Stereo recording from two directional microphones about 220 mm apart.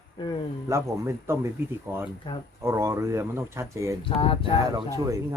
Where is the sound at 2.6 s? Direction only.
15° right (ahead or behind).